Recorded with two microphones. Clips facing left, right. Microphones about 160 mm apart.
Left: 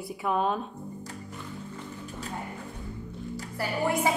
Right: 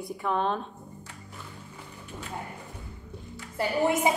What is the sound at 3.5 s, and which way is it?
Speech, 20° right (ahead or behind).